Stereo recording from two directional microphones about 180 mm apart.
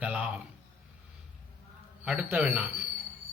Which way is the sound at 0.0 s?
10° right (ahead or behind).